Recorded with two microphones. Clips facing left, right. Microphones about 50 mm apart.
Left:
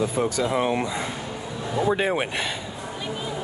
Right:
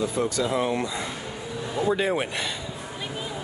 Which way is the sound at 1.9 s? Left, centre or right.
Left.